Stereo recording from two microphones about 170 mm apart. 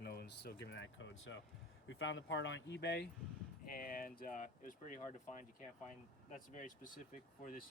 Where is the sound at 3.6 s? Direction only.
55° left (ahead or behind).